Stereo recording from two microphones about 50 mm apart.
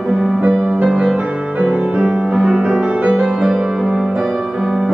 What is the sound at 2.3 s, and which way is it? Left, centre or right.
Music, centre.